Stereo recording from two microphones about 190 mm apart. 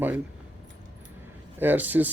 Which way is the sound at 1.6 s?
10° right (ahead or behind).